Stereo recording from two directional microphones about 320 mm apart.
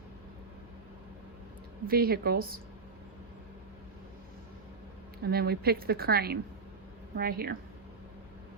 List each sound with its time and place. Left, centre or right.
1.9 s a woman's voice: right
5.2 s a woman's voice: right